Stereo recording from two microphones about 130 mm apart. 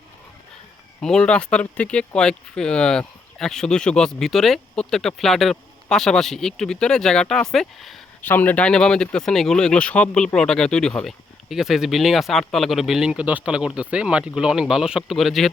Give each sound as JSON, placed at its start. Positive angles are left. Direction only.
{"t": 1.0, "sound": "speech", "side_deg": 5}
{"t": 8.2, "sound": "speech", "side_deg": 15}